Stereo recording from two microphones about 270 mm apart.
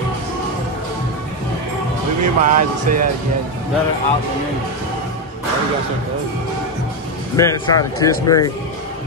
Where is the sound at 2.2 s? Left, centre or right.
Right.